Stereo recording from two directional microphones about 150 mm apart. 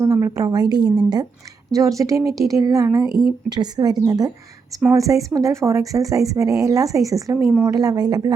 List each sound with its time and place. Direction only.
0.0 s speech: 20° right (ahead or behind)